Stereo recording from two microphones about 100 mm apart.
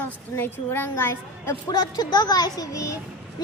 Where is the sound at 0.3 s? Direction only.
20° left (ahead or behind).